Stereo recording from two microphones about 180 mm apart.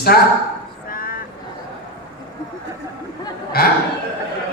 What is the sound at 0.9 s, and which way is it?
Vehicle, 50° left (ahead or behind).